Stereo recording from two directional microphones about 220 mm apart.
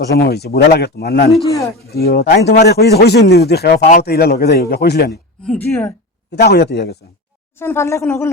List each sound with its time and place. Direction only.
0.2 s a man's voice: 45° left (ahead or behind)
1.5 s speech: 15° left (ahead or behind)
2.0 s a man's voice: 45° left (ahead or behind)
5.5 s speech: 10° left (ahead or behind)
6.3 s a man's voice: 45° left (ahead or behind)
7.5 s speech: 10° left (ahead or behind)